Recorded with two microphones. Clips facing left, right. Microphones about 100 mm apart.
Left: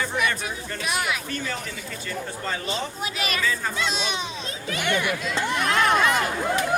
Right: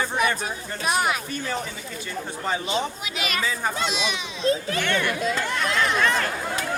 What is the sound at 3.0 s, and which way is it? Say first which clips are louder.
Speech: left 1 dB; 40° left (ahead or behind).